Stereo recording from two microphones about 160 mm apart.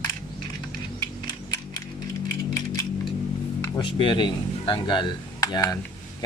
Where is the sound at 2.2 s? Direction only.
20° left (ahead or behind).